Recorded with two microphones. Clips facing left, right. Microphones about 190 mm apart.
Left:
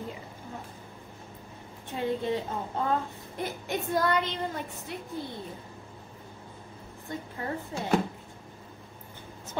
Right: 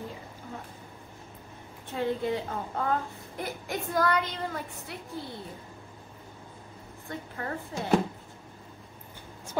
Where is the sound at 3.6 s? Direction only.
25° left (ahead or behind).